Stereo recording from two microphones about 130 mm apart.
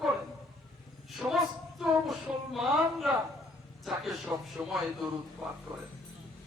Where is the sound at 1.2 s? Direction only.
15° right (ahead or behind).